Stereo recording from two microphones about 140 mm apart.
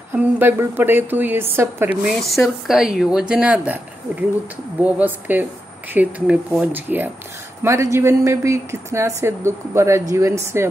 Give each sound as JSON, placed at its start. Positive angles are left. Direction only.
{"t": 0.1, "sound": "speech", "side_deg": -15}
{"t": 2.0, "sound": "a woman's voice", "side_deg": 0}